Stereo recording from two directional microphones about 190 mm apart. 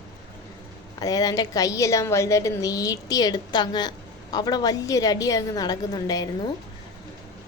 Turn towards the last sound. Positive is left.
turn(degrees=20)  # may be behind; listen again after turning